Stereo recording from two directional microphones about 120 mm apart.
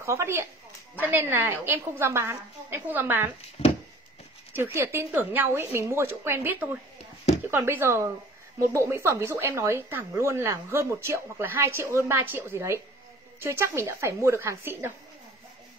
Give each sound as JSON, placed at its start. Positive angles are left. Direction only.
{"t": 0.0, "sound": "speech", "side_deg": -25}
{"t": 3.6, "sound": "a sound", "side_deg": 60}
{"t": 4.7, "sound": "a woman's voice", "side_deg": -20}